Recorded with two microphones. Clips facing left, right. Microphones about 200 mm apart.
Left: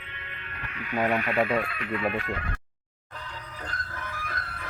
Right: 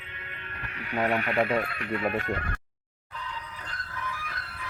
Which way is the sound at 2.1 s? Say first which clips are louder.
Right 2 dB; 45° right (ahead or behind).